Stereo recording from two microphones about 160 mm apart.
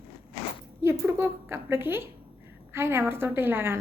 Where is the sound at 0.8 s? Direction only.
15° right (ahead or behind).